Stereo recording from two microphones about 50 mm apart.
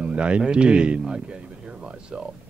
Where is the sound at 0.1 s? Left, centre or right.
Right.